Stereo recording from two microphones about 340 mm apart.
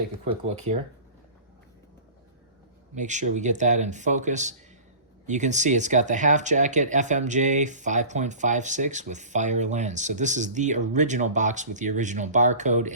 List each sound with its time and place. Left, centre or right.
2.9 s speech: right